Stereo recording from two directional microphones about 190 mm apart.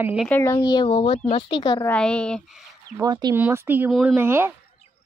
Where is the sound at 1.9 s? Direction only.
5° left (ahead or behind).